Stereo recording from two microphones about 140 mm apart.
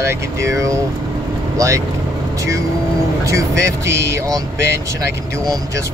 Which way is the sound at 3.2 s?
20° right (ahead or behind).